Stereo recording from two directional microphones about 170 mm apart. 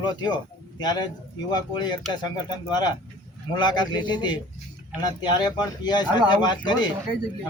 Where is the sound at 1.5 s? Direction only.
25° left (ahead or behind).